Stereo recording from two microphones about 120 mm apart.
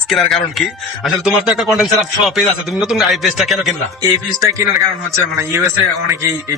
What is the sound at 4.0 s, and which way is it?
A man's voice, 30° right (ahead or behind).